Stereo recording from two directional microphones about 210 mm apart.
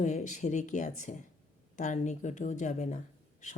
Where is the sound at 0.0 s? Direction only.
35° left (ahead or behind).